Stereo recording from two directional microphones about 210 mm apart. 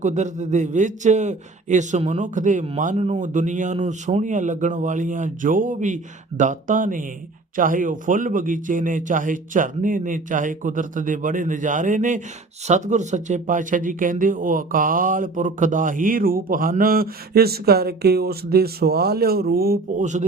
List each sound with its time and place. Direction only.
0.0 s speech: 35° right (ahead or behind)